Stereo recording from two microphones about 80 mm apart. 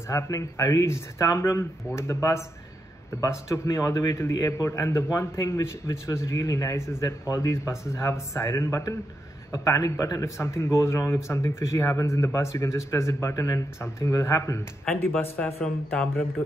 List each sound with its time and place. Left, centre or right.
0.1 s a man's voice: left
15.0 s speech: left
15.4 s speech: centre